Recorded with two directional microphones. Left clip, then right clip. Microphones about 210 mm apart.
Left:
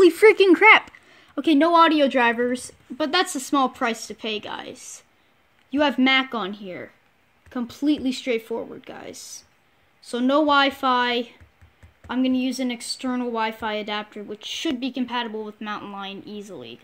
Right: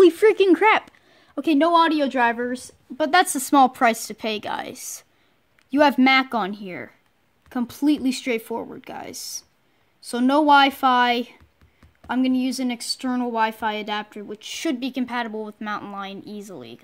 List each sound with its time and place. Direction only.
0.0 s speech: centre (ahead or behind)
3.0 s speech: 25° right (ahead or behind)